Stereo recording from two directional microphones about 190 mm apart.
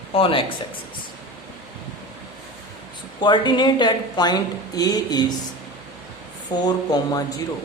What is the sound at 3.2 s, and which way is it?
A woman's voice, 25° left (ahead or behind).